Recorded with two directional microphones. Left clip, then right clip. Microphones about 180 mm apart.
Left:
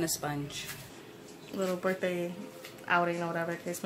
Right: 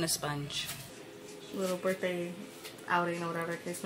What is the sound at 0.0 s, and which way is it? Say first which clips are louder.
Speech: left 1 dB; 5° left (ahead or behind).